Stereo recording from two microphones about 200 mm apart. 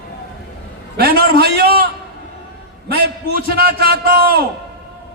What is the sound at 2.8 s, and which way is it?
A man's voice, 50° right (ahead or behind).